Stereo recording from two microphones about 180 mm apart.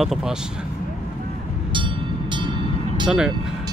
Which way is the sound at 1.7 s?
25° right (ahead or behind).